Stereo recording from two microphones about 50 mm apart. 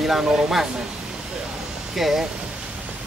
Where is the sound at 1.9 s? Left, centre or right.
Centre.